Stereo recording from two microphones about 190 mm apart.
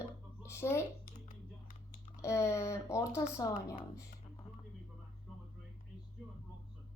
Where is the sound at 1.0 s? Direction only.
45° left (ahead or behind).